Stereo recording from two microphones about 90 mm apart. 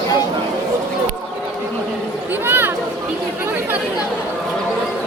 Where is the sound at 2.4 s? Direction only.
20° right (ahead or behind).